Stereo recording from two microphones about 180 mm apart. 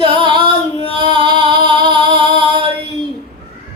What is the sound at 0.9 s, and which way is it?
Singing, 25° right (ahead or behind).